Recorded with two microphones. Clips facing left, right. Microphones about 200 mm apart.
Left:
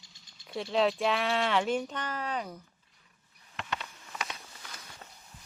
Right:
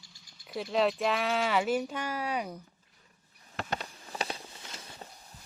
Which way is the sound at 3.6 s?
40° right (ahead or behind).